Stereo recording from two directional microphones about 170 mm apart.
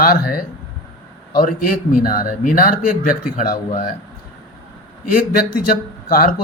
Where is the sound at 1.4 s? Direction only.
55° left (ahead or behind).